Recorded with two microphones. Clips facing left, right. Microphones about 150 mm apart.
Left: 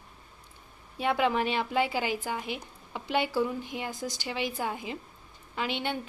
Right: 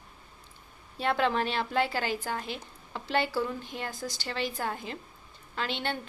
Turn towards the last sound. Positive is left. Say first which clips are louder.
# left 1 dB
turn(degrees=10)  # may be behind; listen again after turning